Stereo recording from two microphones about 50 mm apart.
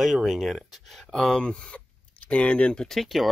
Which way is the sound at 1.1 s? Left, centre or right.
Centre.